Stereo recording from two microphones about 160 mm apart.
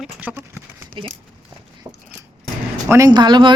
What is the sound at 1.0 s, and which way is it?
Speech, 30° right (ahead or behind).